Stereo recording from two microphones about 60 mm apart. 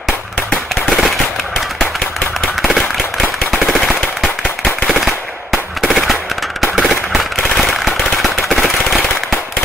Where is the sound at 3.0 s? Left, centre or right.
Centre.